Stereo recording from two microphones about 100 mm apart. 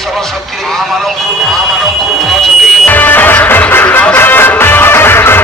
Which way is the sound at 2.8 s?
20° left (ahead or behind).